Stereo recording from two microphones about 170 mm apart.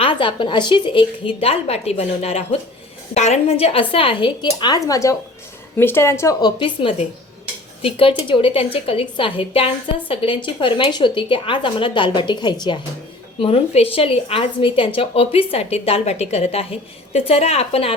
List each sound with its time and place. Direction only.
0.0 s a woman's voice: 30° left (ahead or behind)
6.6 s a woman's voice: 30° left (ahead or behind)